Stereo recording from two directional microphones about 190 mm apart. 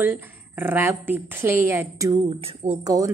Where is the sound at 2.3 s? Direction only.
30° right (ahead or behind).